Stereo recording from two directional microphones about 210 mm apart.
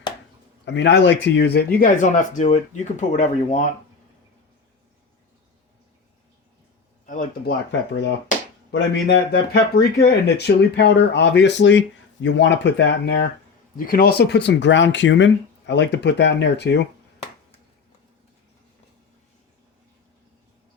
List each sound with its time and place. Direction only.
0.6 s speech: 55° left (ahead or behind); by 3.7 s 35° left (ahead or behind)
7.0 s speech: 40° left (ahead or behind)
7.7 s speech: 60° left (ahead or behind)
13.7 s speech: 45° left (ahead or behind)